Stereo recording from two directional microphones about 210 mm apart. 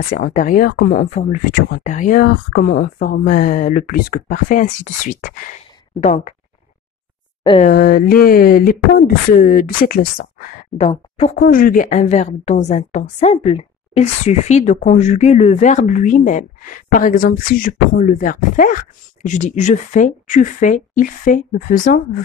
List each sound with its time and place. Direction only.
0.0 s a woman's voice: 35° left (ahead or behind)
7.6 s speech: 45° left (ahead or behind)
10.8 s speech: 30° left (ahead or behind)
11.3 s a woman's voice: 40° left (ahead or behind)